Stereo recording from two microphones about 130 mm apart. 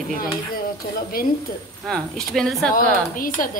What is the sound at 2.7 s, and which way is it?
Speech, 90° left.